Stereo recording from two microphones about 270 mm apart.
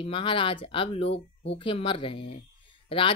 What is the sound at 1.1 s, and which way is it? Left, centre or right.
Speech, left.